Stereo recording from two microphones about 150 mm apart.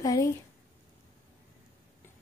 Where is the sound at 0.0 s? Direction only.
25° left (ahead or behind).